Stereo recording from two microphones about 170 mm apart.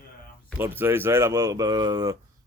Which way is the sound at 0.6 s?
10° right (ahead or behind).